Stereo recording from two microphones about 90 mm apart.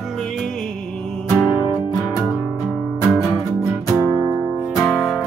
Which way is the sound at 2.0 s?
5° right (ahead or behind).